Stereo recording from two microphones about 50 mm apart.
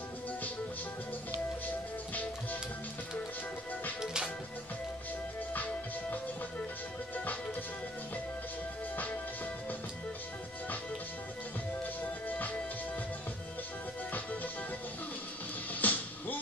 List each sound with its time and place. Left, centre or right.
4.0 s music: centre
5.5 s music: left
8.9 s music: left
12.0 s music: left
15.8 s music: left